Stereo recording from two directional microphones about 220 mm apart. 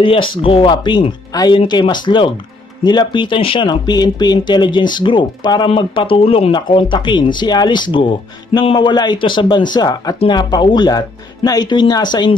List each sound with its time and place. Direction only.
0.0 s speech: 25° left (ahead or behind)